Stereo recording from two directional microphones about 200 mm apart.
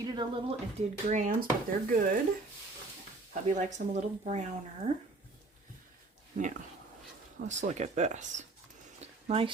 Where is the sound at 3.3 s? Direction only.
35° right (ahead or behind).